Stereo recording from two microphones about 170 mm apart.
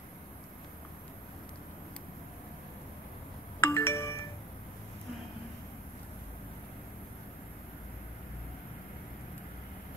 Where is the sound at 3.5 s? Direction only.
15° left (ahead or behind).